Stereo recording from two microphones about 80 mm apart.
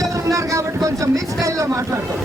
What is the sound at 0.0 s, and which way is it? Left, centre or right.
Speech, right.